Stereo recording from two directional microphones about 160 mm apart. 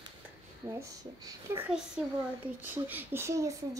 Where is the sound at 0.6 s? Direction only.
20° right (ahead or behind).